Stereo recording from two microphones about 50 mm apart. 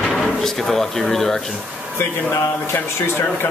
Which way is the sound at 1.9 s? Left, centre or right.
Left.